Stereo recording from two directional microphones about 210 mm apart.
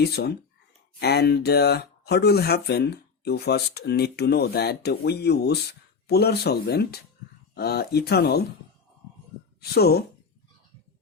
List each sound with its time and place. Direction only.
0.0 s speech: 50° left (ahead or behind)
9.6 s speech: 50° left (ahead or behind)